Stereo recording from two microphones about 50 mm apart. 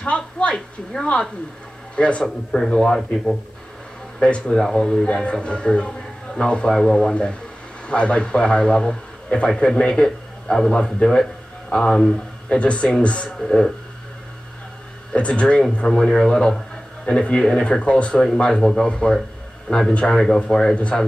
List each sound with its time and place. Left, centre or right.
0.0 s a sound: left
2.0 s speech: left
2.2 s a man's voice: centre
4.2 s a man's voice: centre
13.4 s a man's voice: centre
15.1 s a man's voice: left
18.2 s a man's voice: centre
20.1 s a man's voice: centre
20.7 s speech: left